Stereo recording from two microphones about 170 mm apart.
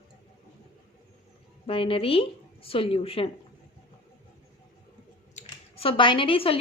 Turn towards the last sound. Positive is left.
turn(degrees=35)  # may be behind; listen again after turning